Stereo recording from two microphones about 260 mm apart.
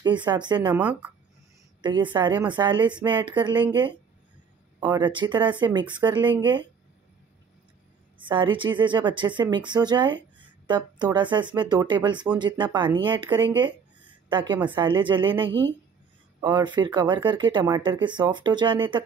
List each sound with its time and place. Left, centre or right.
0.0 s speech: centre
1.8 s speech: centre
4.7 s speech: centre
8.2 s speech: centre